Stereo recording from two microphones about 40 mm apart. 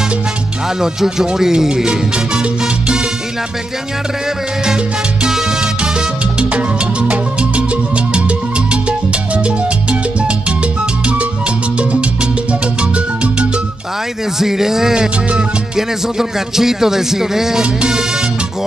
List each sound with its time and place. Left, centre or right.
0.7 s music: centre
1.9 s salsa music: right
5.3 s salsa music: right
6.5 s music: right
11.8 s music: right
14.4 s music: centre